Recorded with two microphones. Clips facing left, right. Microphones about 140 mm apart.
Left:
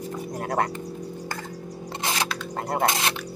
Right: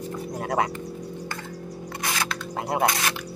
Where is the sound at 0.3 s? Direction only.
Centre (ahead or behind).